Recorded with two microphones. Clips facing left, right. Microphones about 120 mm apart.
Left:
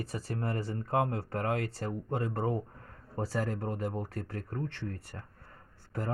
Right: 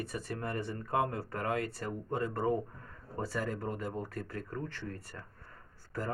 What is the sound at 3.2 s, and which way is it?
Speech, 30° left (ahead or behind).